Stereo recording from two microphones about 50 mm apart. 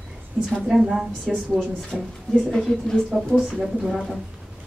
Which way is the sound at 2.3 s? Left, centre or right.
Centre.